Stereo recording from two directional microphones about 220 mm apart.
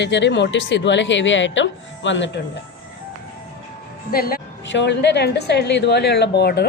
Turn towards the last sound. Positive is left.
turn(degrees=50)  # may be behind; listen again after turning